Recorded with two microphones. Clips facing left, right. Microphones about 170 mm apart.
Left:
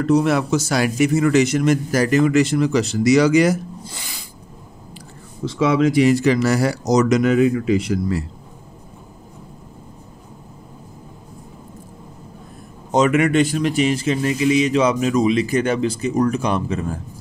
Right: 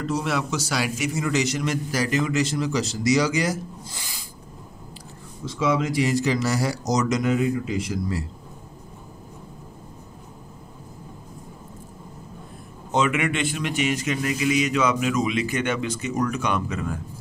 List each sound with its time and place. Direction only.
0.0 s a man's voice: 55° left (ahead or behind)
5.4 s speech: 75° left (ahead or behind)
12.9 s a man's voice: 40° left (ahead or behind)